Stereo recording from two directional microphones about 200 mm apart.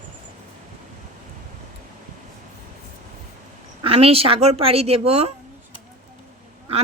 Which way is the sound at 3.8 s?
30° right (ahead or behind).